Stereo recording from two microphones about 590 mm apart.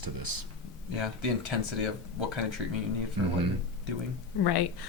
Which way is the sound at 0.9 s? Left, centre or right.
Right.